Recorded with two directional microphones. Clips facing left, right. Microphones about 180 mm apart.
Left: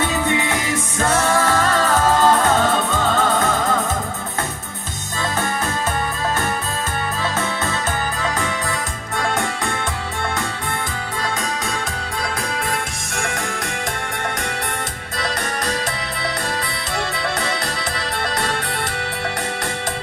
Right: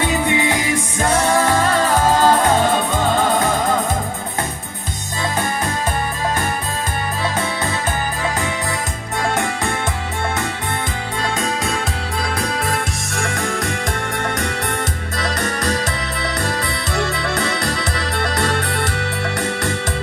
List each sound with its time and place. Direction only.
0.0 s music: 15° right (ahead or behind)